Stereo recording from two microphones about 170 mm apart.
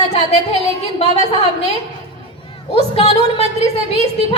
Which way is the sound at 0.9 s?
40° left (ahead or behind).